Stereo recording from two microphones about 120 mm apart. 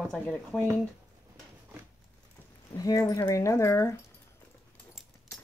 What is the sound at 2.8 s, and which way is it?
Speech, 30° left (ahead or behind).